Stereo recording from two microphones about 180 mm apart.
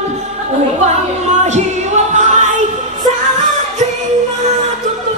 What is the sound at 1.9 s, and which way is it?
Music, 45° right (ahead or behind).